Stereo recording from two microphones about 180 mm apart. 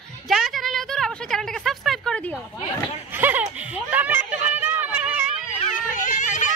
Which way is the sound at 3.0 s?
10° right (ahead or behind).